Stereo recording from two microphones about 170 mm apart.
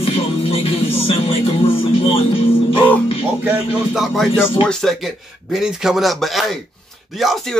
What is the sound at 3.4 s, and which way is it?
Music, 10° right (ahead or behind).